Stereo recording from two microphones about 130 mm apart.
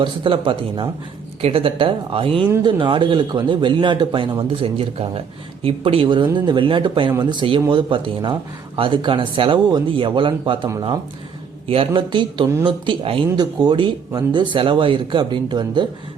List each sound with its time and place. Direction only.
0.0 s speech: 40° right (ahead or behind)
11.7 s speech: 45° right (ahead or behind)